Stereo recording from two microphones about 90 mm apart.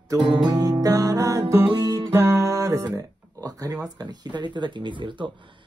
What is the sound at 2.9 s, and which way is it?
Speech, 40° right (ahead or behind).